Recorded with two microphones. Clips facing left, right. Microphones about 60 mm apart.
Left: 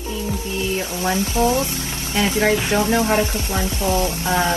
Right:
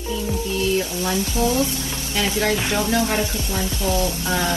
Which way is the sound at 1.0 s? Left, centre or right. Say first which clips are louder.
Left 7 dB; left.